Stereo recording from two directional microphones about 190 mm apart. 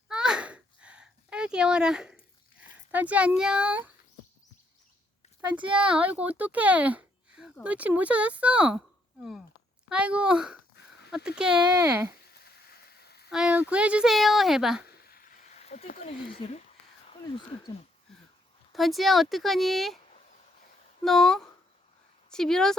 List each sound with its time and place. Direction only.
0.1 s a sound: 5° right (ahead or behind)
2.9 s speech: 10° right (ahead or behind)
5.8 s speech: 5° right (ahead or behind)
9.9 s speech: 5° right (ahead or behind)
11.6 s speech: 20° right (ahead or behind)
13.0 s a sound: 60° left (ahead or behind)
13.3 s speech: 5° right (ahead or behind)
15.0 s chop: 55° left (ahead or behind)
15.5 s a sound: 35° left (ahead or behind)
16.0 s speech: 30° left (ahead or behind)
18.7 s speech: centre (ahead or behind)
21.0 s speech: centre (ahead or behind)